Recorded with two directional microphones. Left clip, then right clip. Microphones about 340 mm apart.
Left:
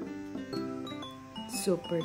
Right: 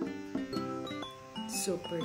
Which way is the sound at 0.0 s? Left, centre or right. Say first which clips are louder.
Right 2 dB; centre.